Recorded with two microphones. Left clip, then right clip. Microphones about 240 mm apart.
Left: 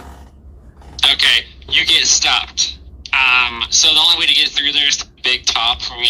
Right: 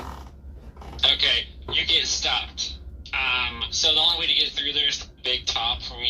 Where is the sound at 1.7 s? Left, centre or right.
Left.